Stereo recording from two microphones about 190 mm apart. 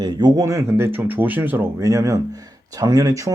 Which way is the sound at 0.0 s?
20° right (ahead or behind).